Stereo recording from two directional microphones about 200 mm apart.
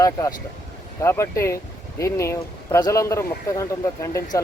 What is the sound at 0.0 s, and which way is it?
Speech, 20° left (ahead or behind).